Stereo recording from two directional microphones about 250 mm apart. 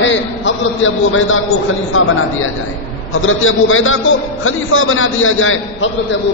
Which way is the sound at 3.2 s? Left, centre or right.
Left.